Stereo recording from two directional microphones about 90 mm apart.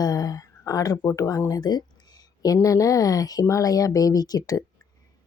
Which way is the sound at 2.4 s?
40° left (ahead or behind).